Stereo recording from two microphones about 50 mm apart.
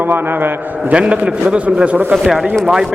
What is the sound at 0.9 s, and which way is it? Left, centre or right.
A man's voice, right.